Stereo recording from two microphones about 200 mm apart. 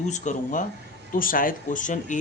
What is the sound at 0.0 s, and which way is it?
Speech, 35° left (ahead or behind).